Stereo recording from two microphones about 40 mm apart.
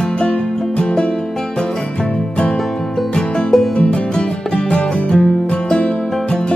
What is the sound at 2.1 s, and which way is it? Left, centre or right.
Music, left.